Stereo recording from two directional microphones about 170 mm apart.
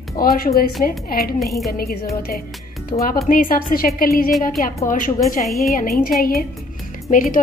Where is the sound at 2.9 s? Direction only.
35° left (ahead or behind).